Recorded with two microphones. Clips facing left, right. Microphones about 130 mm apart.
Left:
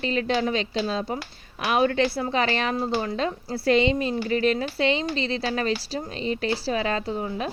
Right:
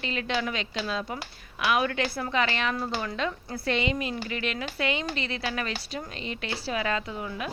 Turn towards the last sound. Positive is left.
turn(degrees=30)  # may be behind; listen again after turning